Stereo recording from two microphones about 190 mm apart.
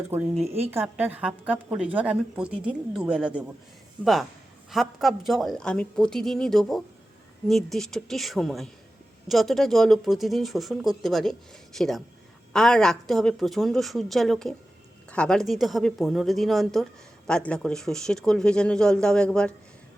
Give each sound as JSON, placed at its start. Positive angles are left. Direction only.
{"t": 0.1, "sound": "speech", "side_deg": -35}
{"t": 0.7, "sound": "a woman's voice", "side_deg": -10}